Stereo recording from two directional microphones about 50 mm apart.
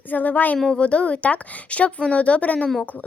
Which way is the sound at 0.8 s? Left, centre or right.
Left.